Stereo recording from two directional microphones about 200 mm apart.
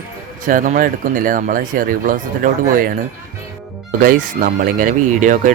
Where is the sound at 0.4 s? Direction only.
40° right (ahead or behind).